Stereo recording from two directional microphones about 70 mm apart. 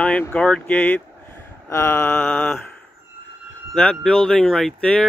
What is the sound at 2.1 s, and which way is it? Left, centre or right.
Speech, centre.